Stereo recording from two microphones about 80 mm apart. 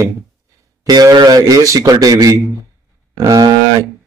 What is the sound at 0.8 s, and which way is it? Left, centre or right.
Speech, right.